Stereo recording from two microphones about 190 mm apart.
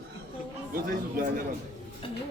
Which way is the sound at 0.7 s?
50° right (ahead or behind).